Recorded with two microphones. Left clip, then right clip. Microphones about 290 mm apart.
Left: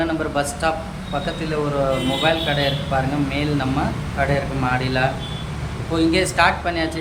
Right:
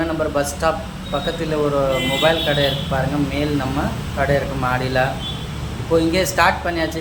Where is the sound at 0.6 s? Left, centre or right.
Centre.